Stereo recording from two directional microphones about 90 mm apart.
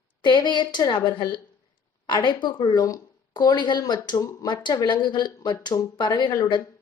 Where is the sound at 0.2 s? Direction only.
60° left (ahead or behind).